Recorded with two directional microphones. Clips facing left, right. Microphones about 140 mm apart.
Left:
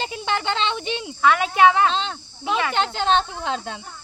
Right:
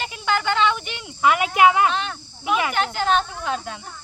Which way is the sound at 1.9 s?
25° left (ahead or behind).